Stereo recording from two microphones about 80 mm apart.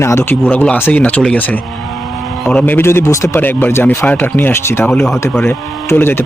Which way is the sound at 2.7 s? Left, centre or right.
Left.